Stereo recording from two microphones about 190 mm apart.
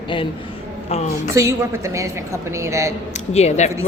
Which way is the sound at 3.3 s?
35° left (ahead or behind).